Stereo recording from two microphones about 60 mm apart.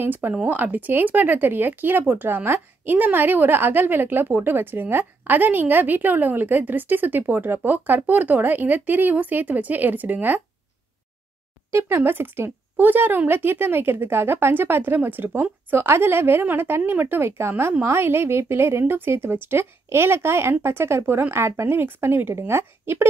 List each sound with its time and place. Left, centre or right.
0.0 s speech: right
11.7 s speech: right